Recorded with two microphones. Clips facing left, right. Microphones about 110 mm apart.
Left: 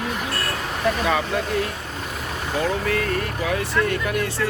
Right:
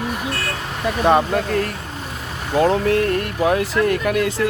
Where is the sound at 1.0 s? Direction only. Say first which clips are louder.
Right 6 dB; 50° right (ahead or behind).